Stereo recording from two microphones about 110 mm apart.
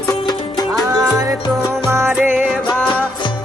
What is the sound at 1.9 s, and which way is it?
Music, 25° right (ahead or behind).